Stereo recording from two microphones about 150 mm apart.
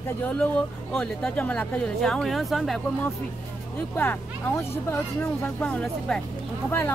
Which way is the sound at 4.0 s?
15° left (ahead or behind).